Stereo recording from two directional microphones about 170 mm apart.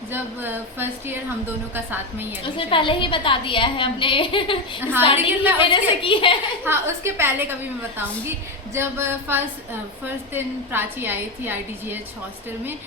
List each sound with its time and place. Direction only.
0.1 s a woman's voice: 15° right (ahead or behind)
2.4 s a woman's voice: 30° left (ahead or behind)
5.1 s a woman's voice: 10° right (ahead or behind)
5.7 s a woman's voice: 30° left (ahead or behind)
6.7 s a woman's voice: 15° right (ahead or behind)
8.7 s a woman's voice: 15° right (ahead or behind)